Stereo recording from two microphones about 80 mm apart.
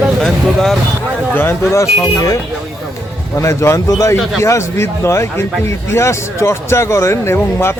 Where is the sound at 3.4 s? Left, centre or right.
Left.